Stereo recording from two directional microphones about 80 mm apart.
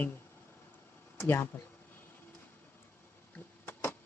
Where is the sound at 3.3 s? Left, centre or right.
Left.